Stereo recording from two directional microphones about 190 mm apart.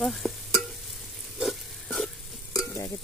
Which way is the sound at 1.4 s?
Centre (ahead or behind).